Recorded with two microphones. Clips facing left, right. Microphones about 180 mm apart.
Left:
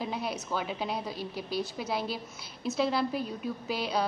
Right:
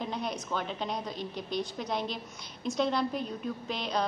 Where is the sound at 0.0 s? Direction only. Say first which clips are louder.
Left 1 dB; 5° left (ahead or behind).